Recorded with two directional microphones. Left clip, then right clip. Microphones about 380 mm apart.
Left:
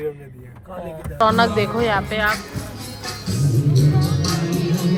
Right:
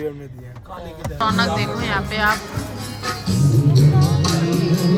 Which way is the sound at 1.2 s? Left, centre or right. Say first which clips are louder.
Left 4 dB; centre.